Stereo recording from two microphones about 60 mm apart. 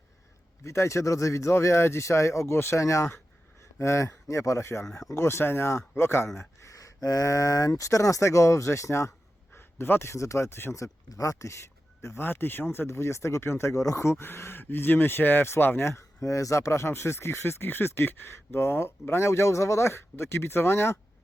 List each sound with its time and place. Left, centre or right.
0.6 s speech: left
6.7 s speech: left
9.6 s a sound: left
10.1 s speech: left
11.1 s speech: left
15.9 s speech: left